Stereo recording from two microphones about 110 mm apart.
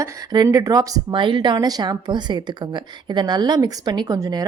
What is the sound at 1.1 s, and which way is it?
A woman's voice, 45° right (ahead or behind).